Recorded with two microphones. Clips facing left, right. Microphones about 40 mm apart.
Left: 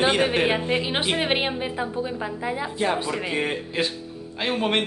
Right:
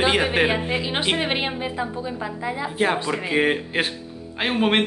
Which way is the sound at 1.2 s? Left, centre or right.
Centre.